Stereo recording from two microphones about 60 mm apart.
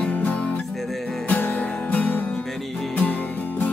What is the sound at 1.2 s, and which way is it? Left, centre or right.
Music, left.